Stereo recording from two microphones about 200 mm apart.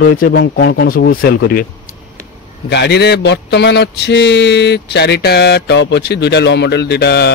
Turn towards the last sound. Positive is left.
turn(degrees=55)  # may be behind; listen again after turning